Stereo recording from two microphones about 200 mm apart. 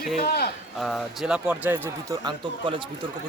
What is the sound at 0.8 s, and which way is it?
Speech, centre (ahead or behind).